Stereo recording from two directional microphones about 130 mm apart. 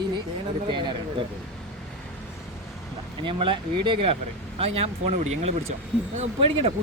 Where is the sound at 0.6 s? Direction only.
40° right (ahead or behind).